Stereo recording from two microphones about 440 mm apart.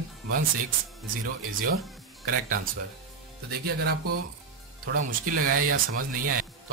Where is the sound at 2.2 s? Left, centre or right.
Right.